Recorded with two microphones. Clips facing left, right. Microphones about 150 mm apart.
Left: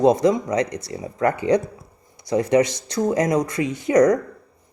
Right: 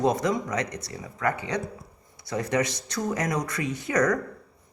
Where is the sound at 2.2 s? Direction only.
15° left (ahead or behind).